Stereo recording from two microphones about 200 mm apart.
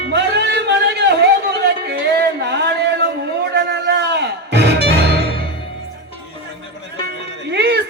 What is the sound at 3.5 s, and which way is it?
Music, 55° right (ahead or behind).